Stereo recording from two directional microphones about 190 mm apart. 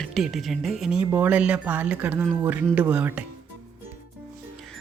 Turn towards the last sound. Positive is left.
turn(degrees=-5)  # may be behind; listen again after turning